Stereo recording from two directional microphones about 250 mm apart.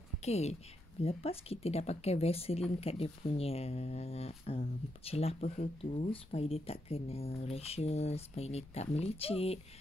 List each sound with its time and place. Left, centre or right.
0.2 s a woman's voice: left